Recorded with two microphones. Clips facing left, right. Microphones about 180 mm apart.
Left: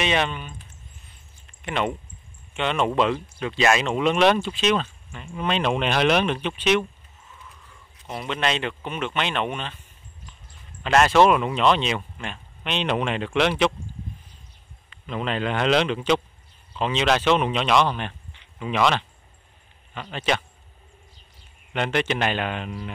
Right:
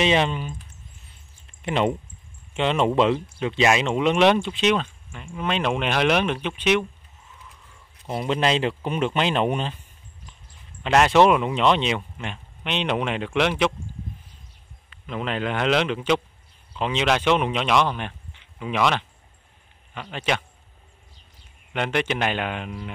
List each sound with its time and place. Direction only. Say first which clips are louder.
0.0 s speech: right 3 dB; 30° right (ahead or behind)
1.6 s speech: right 3 dB; 30° right (ahead or behind); by 6.8 s 15° right (ahead or behind)
8.1 s speech: right 4 dB; 30° right (ahead or behind)
10.8 s speech: even; 15° right (ahead or behind)
15.0 s speech: left 1 dB; 10° right (ahead or behind)
21.7 s speech: even; 10° right (ahead or behind)